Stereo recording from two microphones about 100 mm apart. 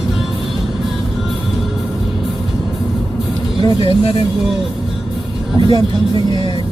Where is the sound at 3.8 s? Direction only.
60° left (ahead or behind).